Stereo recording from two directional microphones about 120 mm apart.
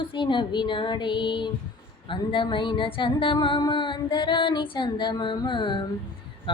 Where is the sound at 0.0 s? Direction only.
40° left (ahead or behind).